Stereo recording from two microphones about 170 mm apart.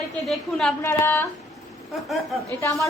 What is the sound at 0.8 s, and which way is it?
Speech, 15° left (ahead or behind).